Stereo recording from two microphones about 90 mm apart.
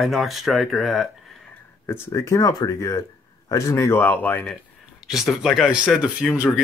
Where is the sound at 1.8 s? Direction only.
30° left (ahead or behind).